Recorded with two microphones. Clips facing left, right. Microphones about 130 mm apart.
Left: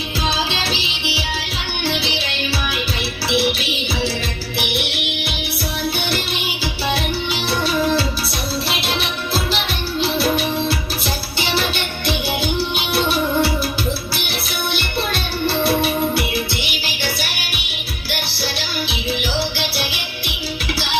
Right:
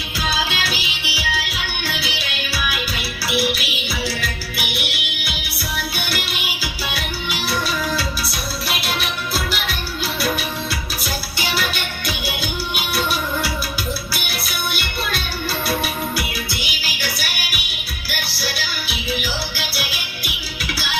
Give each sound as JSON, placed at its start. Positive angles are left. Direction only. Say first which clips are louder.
{"t": 0.3, "sound": "music", "louder": "left 1 dB", "side_deg": 25}
{"t": 3.2, "sound": "music", "louder": "left 2 dB", "side_deg": 25}
{"t": 6.0, "sound": "music", "louder": "left 4 dB", "side_deg": 25}
{"t": 10.0, "sound": "music", "louder": "left 5 dB", "side_deg": 30}
{"t": 12.0, "sound": "music", "louder": "left 7 dB", "side_deg": 30}
{"t": 14.8, "sound": "music", "louder": "left 3 dB", "side_deg": 30}
{"t": 19.5, "sound": "music", "louder": "left 4 dB", "side_deg": 30}